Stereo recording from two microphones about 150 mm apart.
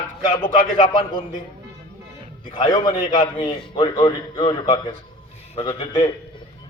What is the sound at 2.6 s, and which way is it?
A man's voice, 30° left (ahead or behind).